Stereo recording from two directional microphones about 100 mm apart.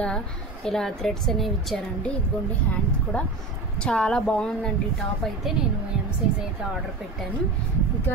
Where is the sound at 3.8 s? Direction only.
10° left (ahead or behind).